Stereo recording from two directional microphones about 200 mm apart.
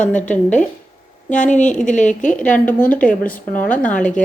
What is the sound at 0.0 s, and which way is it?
Speech, 10° left (ahead or behind).